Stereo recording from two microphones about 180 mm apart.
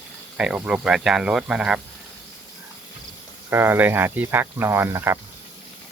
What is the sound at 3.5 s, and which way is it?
Speech, 15° right (ahead or behind).